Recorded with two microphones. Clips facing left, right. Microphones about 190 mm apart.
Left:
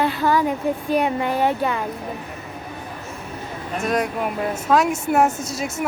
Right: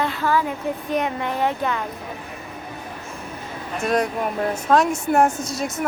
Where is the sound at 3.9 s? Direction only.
Centre (ahead or behind).